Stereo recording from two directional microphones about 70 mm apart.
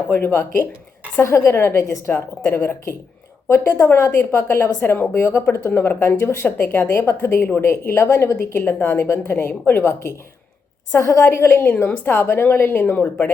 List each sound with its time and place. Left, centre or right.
0.1 s speech: left
11.7 s a woman's voice: left